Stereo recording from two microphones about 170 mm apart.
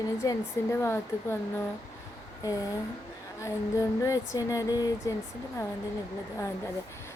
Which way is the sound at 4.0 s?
20° left (ahead or behind).